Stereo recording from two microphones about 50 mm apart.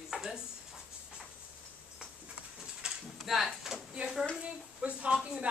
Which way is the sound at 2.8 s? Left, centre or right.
Centre.